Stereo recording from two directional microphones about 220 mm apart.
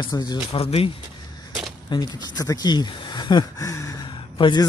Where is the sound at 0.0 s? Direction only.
20° left (ahead or behind).